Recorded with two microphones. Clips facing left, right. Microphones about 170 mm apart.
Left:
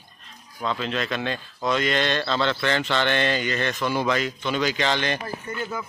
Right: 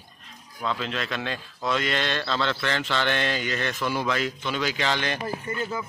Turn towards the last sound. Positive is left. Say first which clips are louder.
# right 1 dB
turn(degrees=0)  # may be behind; listen again after turning